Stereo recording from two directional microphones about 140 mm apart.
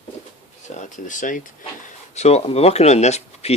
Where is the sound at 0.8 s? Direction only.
65° left (ahead or behind).